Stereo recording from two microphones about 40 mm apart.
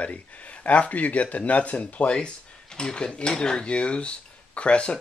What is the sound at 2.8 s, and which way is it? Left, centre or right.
Speech, left.